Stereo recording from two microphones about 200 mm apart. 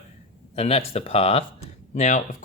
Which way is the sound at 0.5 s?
30° left (ahead or behind).